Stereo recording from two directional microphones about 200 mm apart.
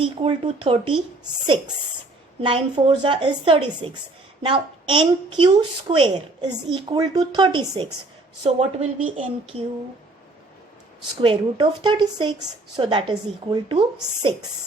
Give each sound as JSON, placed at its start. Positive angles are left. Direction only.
{"t": 0.0, "sound": "a woman's voice", "side_deg": -30}
{"t": 2.4, "sound": "a woman's voice", "side_deg": -25}
{"t": 11.2, "sound": "a woman's voice", "side_deg": -25}